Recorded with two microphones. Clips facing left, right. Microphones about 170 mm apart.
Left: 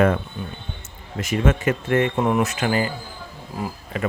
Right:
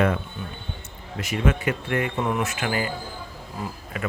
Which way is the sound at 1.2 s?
45° left (ahead or behind).